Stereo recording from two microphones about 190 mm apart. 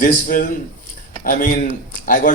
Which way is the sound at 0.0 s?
45° left (ahead or behind).